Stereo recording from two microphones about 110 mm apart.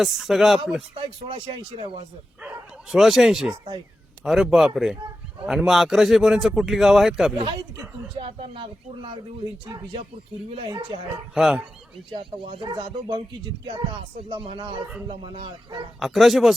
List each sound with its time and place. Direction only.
0.0 s a man's voice: centre (ahead or behind)
0.9 s speech: 50° right (ahead or behind)
2.4 s bow-wow: 5° right (ahead or behind)
4.2 s a man's voice: 5° right (ahead or behind)
8.1 s speech: 55° right (ahead or behind)
10.7 s speech: 45° right (ahead or behind)
11.3 s a man's voice: 5° right (ahead or behind)
12.6 s speech: 40° right (ahead or behind)
14.2 s speech: 60° right (ahead or behind)
16.0 s a man's voice: centre (ahead or behind)